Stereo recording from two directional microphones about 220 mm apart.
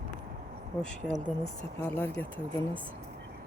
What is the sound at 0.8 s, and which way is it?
Speech, 5° left (ahead or behind).